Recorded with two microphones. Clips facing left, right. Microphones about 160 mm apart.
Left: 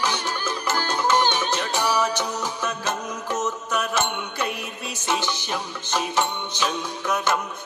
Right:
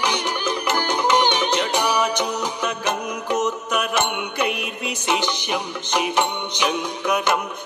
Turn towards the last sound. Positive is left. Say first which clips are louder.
# right 3 dB
turn(degrees=-15)  # may be behind; listen again after turning